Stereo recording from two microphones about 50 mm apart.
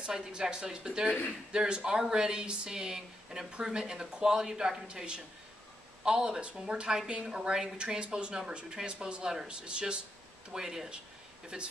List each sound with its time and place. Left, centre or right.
0.0 s speech: centre